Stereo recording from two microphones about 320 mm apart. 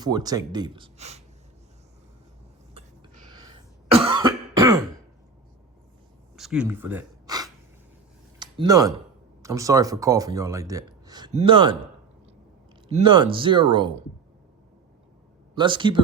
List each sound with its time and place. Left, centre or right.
0.0 s speech: centre
2.7 s music: centre
3.9 s cough: centre
6.3 s a sound: centre
8.4 s speech: centre
12.9 s speech: centre
15.5 s speech: centre